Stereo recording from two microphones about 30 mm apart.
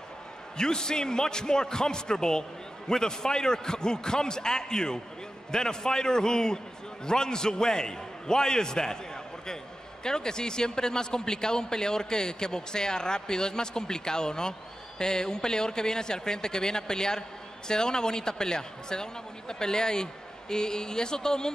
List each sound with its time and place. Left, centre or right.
0.6 s a man's voice: left